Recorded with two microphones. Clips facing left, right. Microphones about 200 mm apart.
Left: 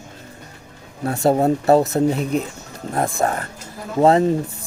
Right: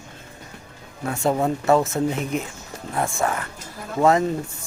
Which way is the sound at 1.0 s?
35° left (ahead or behind).